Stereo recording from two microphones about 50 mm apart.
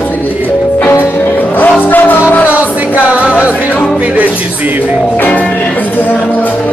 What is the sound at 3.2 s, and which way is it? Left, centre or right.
Music, right.